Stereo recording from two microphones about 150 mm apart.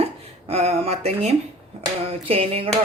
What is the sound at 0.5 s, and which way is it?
Speech, 45° right (ahead or behind).